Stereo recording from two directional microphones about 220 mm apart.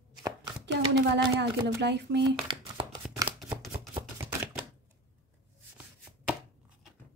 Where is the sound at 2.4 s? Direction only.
20° right (ahead or behind).